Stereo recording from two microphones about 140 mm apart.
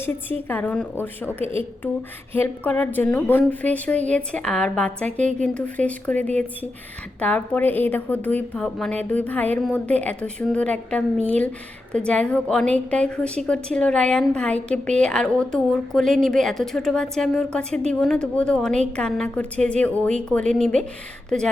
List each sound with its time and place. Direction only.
0.4 s a woman's voice: 10° left (ahead or behind)
1.4 s a woman's voice: 40° right (ahead or behind)
2.3 s a woman's voice: 10° left (ahead or behind)